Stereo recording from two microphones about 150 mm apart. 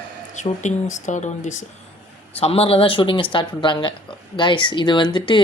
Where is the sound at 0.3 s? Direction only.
55° left (ahead or behind).